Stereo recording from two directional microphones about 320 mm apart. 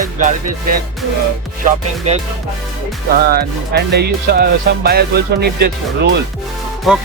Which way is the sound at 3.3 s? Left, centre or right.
Right.